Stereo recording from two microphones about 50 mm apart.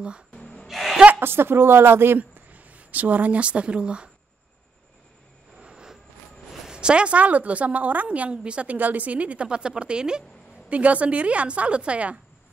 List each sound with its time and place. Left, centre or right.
0.4 s music: left
0.7 s sneeze: centre
1.2 s speech: right
2.1 s speech: right
5.6 s vehicle: centre
6.7 s a woman's voice: centre
8.7 s a woman's voice: right; by 10.2 s centre
10.7 s a woman's voice: right